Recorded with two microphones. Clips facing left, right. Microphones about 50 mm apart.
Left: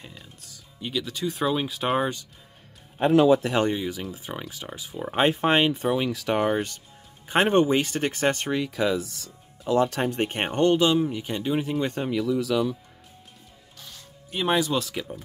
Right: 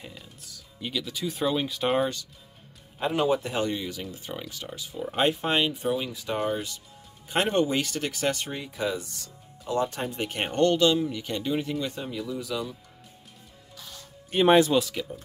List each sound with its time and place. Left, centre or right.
0.0 s speech: centre
3.0 s speech: left
3.7 s speech: centre
4.3 s speech: left
5.9 s speech: left
7.2 s speech: left
8.5 s speech: left
9.8 s speech: left
10.1 s speech: left
10.4 s speech: centre
11.8 s speech: left
12.1 s speech: left
14.7 s speech: centre